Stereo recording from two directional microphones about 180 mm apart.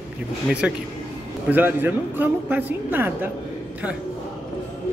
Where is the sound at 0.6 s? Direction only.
5° right (ahead or behind).